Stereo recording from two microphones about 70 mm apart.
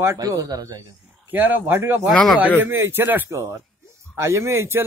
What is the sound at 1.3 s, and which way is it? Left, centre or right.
A man's voice, right.